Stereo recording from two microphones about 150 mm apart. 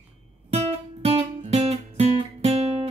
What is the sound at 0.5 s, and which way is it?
Music, 40° right (ahead or behind).